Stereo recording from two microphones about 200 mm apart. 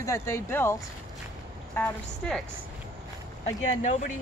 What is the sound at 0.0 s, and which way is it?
A woman's voice, 15° left (ahead or behind).